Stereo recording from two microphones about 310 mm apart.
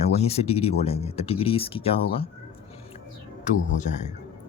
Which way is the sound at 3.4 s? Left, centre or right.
Left.